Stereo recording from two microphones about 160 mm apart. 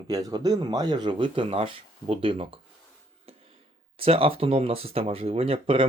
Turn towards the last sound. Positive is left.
turn(degrees=-35)  # may be behind; listen again after turning